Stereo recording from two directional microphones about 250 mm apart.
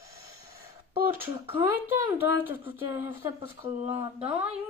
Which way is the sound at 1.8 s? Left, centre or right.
Centre.